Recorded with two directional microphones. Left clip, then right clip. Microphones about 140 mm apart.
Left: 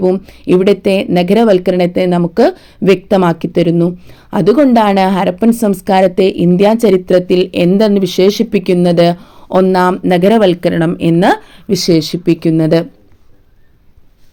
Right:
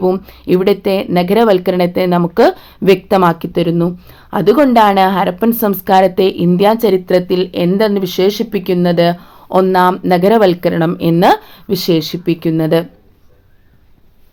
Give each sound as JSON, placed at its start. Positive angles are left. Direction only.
{"t": 0.0, "sound": "speech", "side_deg": 15}